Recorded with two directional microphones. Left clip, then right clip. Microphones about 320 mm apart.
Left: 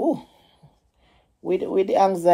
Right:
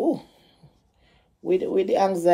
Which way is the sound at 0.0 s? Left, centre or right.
Centre.